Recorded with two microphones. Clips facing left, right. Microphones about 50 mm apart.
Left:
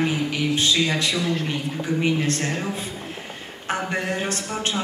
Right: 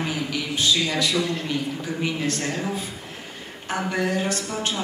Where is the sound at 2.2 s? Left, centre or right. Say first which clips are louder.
Left 1 dB; left.